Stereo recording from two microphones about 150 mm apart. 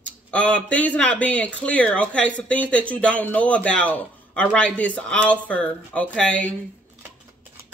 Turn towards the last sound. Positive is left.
turn(degrees=10)  # may be behind; listen again after turning